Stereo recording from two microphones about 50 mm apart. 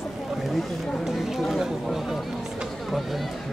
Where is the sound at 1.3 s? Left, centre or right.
Centre.